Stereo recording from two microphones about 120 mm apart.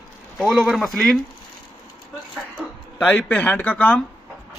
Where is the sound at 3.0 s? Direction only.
15° left (ahead or behind).